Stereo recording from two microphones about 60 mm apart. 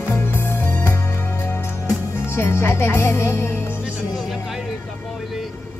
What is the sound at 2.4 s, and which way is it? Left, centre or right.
Music, left.